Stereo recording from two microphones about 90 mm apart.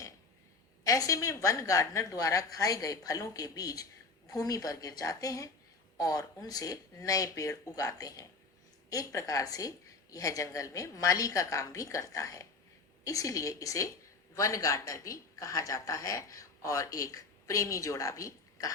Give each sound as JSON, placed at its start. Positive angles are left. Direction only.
{"t": 0.9, "sound": "a woman's voice", "side_deg": 40}